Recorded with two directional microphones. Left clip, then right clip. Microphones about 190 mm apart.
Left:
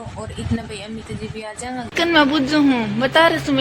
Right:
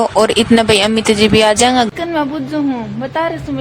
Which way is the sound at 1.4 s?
55° right (ahead or behind).